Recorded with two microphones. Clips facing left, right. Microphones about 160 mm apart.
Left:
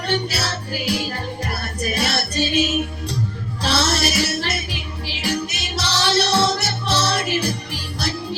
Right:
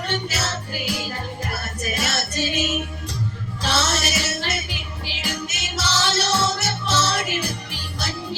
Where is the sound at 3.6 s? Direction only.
35° left (ahead or behind).